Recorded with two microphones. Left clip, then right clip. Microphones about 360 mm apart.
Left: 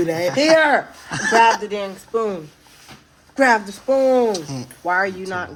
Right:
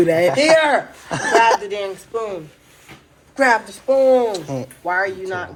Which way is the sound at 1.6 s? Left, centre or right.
Left.